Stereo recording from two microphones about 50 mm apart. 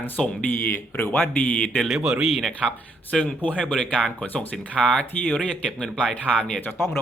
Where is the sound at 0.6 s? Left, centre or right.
Left.